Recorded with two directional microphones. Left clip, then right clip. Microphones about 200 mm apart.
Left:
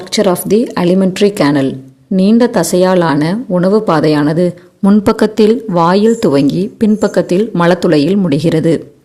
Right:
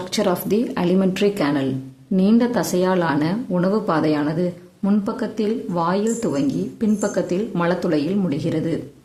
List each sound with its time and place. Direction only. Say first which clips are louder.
0.1 s speech: left 10 dB; 30° left (ahead or behind)